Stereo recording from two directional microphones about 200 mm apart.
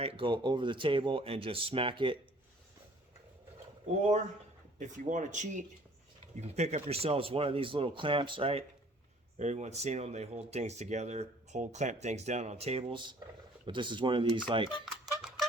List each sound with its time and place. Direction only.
0.0 s speech: 25° right (ahead or behind)
4.8 s speech: 40° right (ahead or behind)
14.8 s music: centre (ahead or behind)